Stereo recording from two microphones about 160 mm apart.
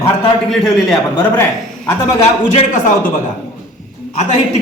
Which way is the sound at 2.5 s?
45° left (ahead or behind).